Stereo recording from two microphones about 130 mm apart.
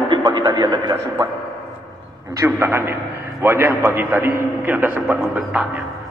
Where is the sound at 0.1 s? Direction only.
35° right (ahead or behind).